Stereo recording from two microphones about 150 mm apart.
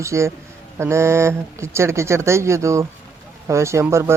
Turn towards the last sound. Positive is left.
turn(degrees=-20)  # may be behind; listen again after turning